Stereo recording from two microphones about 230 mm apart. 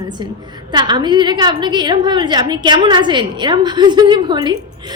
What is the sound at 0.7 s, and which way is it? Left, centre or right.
A woman's voice, centre.